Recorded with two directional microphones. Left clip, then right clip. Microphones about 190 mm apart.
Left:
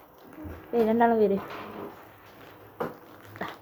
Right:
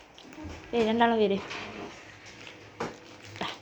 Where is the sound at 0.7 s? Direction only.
10° left (ahead or behind).